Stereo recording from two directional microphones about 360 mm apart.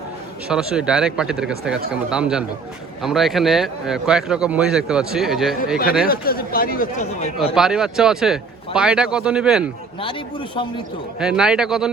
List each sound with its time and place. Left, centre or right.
0.4 s a man's voice: centre
6.1 s speech: left
7.5 s a man's voice: centre
10.0 s a man's voice: centre
11.2 s a man's voice: centre